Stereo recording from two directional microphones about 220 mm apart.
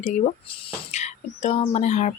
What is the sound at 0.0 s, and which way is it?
Speech, 25° left (ahead or behind).